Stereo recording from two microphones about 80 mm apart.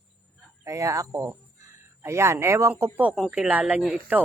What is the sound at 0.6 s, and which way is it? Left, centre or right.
Speech, right.